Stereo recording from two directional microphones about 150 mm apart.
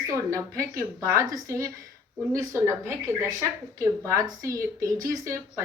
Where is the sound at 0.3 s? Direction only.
20° right (ahead or behind).